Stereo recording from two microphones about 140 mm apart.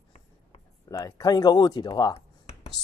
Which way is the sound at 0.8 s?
25° left (ahead or behind).